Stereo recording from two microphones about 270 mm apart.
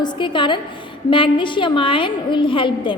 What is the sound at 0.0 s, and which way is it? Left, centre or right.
A woman's voice, centre.